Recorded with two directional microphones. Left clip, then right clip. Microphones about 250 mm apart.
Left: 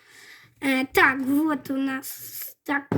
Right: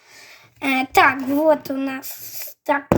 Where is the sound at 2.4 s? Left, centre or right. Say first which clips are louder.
Right 7 dB; right.